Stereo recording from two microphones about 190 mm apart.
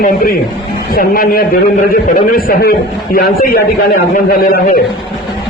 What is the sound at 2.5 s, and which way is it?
A man's voice, 50° left (ahead or behind).